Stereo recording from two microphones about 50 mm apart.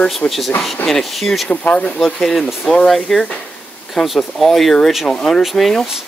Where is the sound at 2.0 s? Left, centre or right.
Centre.